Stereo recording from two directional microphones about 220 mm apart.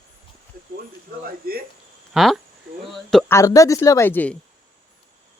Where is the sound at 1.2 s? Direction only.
45° right (ahead or behind).